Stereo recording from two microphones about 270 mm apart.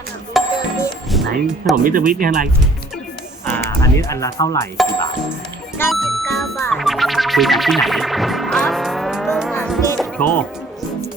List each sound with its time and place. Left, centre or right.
0.4 s music: centre
1.1 s speech: centre
1.7 s speech: right
3.4 s music: centre
5.7 s music: centre